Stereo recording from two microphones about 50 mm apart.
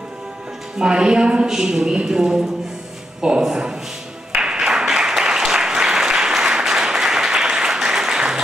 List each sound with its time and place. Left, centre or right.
0.7 s a woman's voice: centre
4.3 s applause: centre